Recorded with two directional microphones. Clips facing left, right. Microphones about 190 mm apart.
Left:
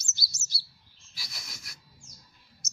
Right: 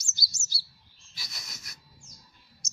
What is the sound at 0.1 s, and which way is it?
Chirp, 20° left (ahead or behind).